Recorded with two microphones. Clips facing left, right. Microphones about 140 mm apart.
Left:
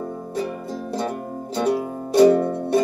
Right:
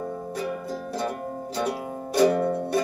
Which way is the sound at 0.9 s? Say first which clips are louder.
Left 3 dB; 25° left (ahead or behind).